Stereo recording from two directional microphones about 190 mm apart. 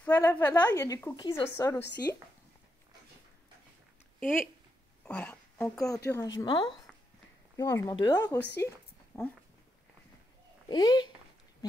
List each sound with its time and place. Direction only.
0.0 s a woman's voice: 10° left (ahead or behind); by 1.7 s 25° left (ahead or behind)
4.2 s a woman's voice: 10° left (ahead or behind)
10.7 s a woman's voice: 20° left (ahead or behind)